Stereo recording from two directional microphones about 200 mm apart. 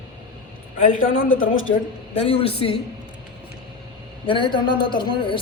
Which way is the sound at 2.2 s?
30° left (ahead or behind).